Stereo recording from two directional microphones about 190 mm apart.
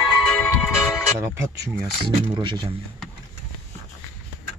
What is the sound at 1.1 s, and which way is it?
Speech, 15° right (ahead or behind).